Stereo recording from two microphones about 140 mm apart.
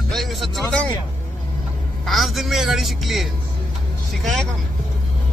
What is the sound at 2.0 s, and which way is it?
Speech, centre (ahead or behind).